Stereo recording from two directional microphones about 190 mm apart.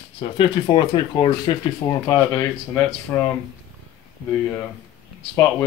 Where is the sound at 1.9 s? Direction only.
15° left (ahead or behind).